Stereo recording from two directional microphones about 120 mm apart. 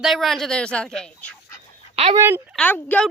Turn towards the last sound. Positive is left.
turn(degrees=15)  # may be behind; listen again after turning